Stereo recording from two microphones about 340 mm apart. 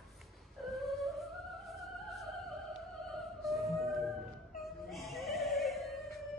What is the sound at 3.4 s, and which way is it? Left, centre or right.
Music, centre.